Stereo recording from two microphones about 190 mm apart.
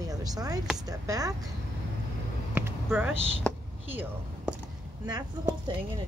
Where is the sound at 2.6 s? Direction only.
10° right (ahead or behind).